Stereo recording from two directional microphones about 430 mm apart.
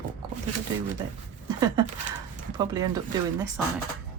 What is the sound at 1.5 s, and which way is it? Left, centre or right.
Speech, centre.